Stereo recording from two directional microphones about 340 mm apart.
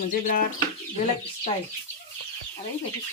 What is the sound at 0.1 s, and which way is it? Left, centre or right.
Speech, left.